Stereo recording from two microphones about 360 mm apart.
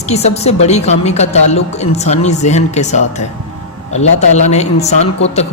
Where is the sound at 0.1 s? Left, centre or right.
Centre.